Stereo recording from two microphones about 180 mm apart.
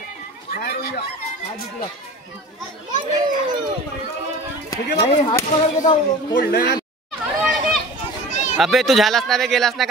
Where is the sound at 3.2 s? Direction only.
25° right (ahead or behind).